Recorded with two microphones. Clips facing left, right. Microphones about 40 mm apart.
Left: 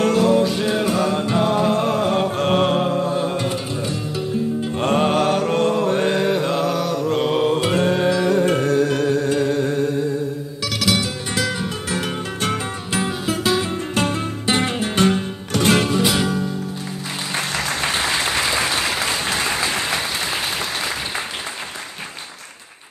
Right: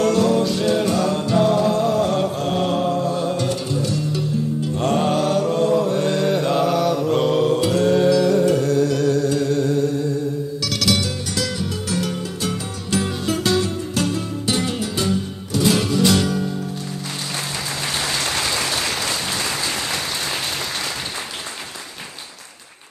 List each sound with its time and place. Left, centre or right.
0.1 s music: centre; by 2.0 s left
2.3 s mantra: left
2.9 s music: left
6.0 s mantra: left
6.3 s mantra: centre
7.2 s music: left
10.6 s music: centre
11.3 s music: left
12.4 s music: left
12.9 s music: left
13.7 s music: left
16.1 s music: centre